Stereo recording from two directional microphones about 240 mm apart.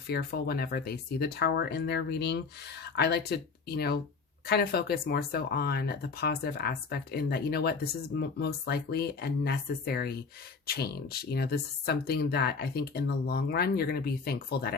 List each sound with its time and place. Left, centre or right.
0.1 s speech: left